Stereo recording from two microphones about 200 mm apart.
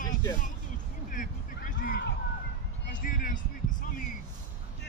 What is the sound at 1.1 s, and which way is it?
Vehicle, 40° left (ahead or behind).